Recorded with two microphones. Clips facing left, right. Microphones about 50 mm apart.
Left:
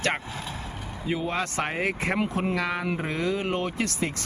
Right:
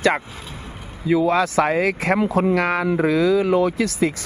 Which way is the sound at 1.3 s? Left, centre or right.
Right.